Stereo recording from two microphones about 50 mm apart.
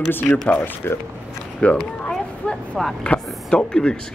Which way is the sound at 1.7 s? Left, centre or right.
Centre.